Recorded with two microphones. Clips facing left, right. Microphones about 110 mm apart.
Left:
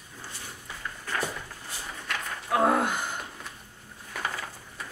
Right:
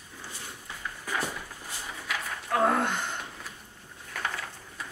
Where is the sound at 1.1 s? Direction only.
10° right (ahead or behind).